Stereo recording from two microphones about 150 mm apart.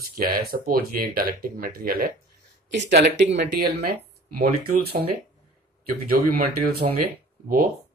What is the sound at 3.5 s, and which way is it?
Speech, 90° right.